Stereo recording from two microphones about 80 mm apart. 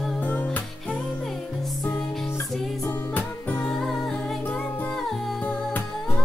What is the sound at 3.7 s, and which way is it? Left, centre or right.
Music, centre.